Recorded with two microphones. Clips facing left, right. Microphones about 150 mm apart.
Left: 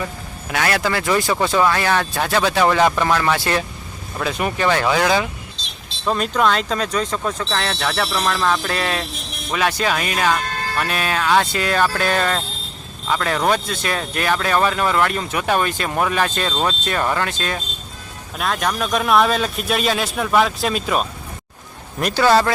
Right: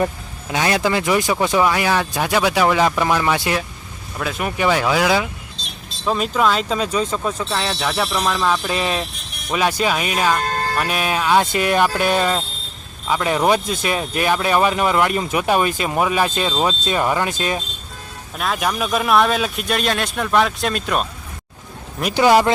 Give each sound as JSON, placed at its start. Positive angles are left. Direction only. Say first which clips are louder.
{"t": 0.5, "sound": "speech", "louder": "right 2 dB", "side_deg": -15}
{"t": 4.2, "sound": "speech", "louder": "even", "side_deg": 0}
{"t": 18.3, "sound": "speech", "louder": "even", "side_deg": -5}
{"t": 22.1, "sound": "speech", "louder": "right 2 dB", "side_deg": -15}